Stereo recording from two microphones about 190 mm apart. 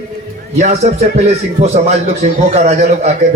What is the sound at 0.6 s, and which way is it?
A man's voice, 35° right (ahead or behind).